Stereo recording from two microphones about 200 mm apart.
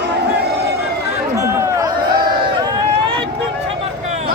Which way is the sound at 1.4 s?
15° right (ahead or behind).